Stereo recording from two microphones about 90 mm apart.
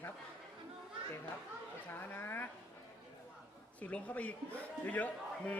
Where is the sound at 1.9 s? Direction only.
20° left (ahead or behind).